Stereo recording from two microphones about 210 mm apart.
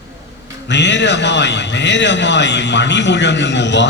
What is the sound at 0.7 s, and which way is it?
A man's voice, 55° left (ahead or behind).